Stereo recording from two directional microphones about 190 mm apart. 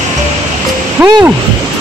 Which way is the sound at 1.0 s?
10° right (ahead or behind).